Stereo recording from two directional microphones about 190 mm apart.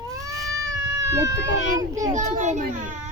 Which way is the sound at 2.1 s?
40° right (ahead or behind).